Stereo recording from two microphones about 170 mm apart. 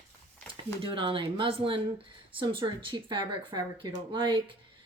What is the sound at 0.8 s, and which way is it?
Speech, 30° right (ahead or behind).